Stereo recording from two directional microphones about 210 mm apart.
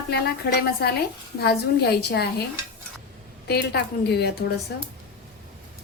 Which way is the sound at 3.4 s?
50° left (ahead or behind).